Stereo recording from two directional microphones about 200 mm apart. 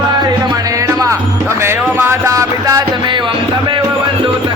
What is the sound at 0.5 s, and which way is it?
Music, 15° right (ahead or behind).